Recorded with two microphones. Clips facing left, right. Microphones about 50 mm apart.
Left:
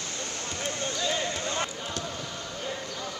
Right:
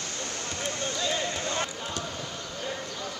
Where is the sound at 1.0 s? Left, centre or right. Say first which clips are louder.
Even; left.